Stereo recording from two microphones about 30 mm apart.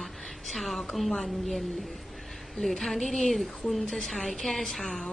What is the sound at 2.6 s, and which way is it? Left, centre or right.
A woman's voice, centre.